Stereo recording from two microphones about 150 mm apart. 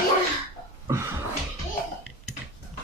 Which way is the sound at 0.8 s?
20° right (ahead or behind).